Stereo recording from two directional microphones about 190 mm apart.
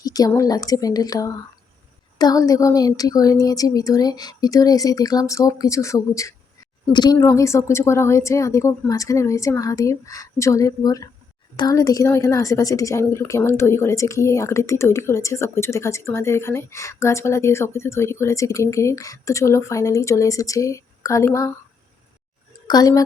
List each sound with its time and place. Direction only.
0.0 s a woman's voice: 20° left (ahead or behind)
22.6 s a woman's voice: 20° left (ahead or behind)